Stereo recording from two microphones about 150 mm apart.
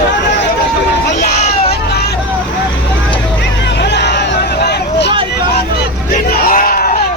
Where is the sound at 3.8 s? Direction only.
90° left.